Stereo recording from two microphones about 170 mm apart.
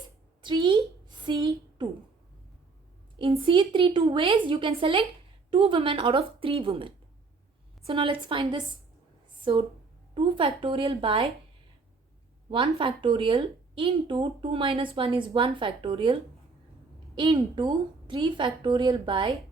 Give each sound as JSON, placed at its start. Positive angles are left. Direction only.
{"t": 0.4, "sound": "a woman's voice", "side_deg": -30}
{"t": 3.2, "sound": "a woman's voice", "side_deg": -30}
{"t": 12.5, "sound": "a woman's voice", "side_deg": -35}